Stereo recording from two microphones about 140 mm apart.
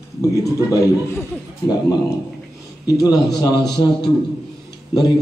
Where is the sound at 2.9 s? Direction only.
25° left (ahead or behind).